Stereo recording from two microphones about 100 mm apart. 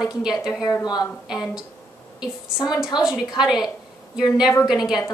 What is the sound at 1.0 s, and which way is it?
Speech, 5° right (ahead or behind).